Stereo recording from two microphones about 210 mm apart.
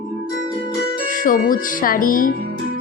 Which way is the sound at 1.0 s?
40° left (ahead or behind).